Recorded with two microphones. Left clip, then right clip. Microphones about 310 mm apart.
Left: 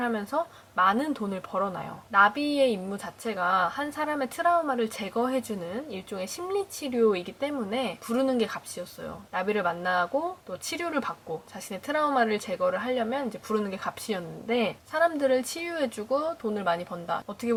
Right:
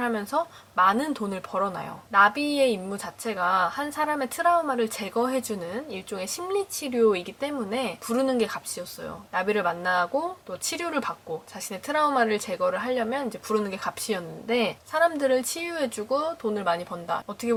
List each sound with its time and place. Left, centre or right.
0.0 s speech: centre
16.0 s speech: centre
16.6 s speech: centre